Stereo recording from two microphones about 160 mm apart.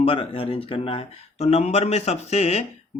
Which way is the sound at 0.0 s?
35° left (ahead or behind).